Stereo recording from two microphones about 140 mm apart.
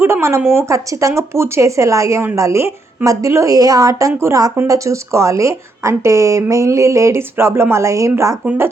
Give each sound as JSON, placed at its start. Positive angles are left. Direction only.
{"t": 0.0, "sound": "speech", "side_deg": -20}